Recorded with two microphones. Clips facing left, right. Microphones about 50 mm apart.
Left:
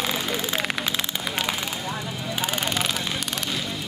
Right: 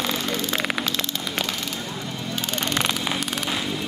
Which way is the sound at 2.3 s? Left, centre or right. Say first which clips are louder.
Even; centre.